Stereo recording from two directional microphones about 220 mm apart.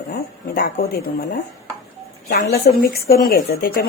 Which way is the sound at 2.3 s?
45° left (ahead or behind).